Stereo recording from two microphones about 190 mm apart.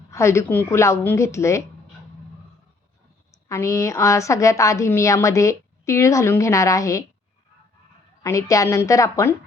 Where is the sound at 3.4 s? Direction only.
15° left (ahead or behind).